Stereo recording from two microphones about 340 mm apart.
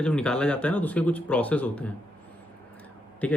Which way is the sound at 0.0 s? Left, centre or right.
Centre.